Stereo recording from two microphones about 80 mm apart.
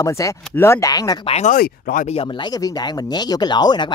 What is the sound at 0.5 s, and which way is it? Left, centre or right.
Speech, left.